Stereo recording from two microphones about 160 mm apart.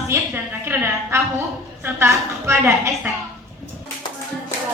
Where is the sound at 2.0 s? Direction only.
15° right (ahead or behind).